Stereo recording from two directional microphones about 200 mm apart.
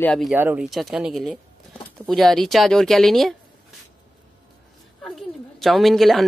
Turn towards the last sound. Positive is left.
turn(degrees=0)  # may be behind; listen again after turning